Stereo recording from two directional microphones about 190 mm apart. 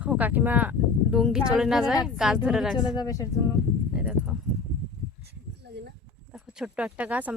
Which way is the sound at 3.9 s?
5° right (ahead or behind).